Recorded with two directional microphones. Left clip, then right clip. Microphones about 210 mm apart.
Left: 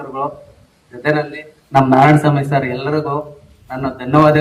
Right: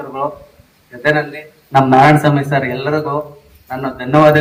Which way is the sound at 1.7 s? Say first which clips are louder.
Right 2 dB; 40° right (ahead or behind).